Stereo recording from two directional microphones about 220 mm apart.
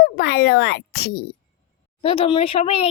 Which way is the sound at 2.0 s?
25° left (ahead or behind).